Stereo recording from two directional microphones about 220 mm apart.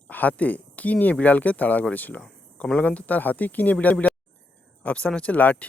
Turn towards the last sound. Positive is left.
turn(degrees=5)  # may be behind; listen again after turning